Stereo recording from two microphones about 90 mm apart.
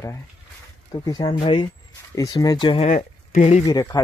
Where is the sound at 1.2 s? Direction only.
65° left (ahead or behind).